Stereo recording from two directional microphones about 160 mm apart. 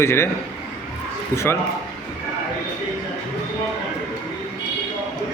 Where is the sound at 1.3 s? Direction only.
15° left (ahead or behind).